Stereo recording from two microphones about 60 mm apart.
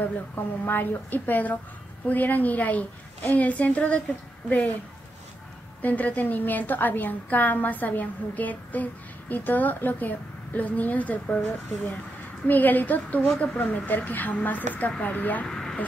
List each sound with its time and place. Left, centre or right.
0.7 s a woman's voice: left
5.8 s a woman's voice: left
12.4 s a woman's voice: left
15.4 s speech: centre